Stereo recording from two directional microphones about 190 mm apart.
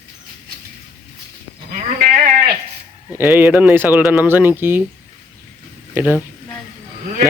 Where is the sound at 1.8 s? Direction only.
45° right (ahead or behind).